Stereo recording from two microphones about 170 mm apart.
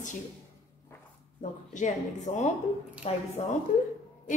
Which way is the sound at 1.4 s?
45° left (ahead or behind).